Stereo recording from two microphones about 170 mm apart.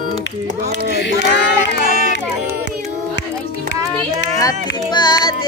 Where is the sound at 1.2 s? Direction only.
90° left.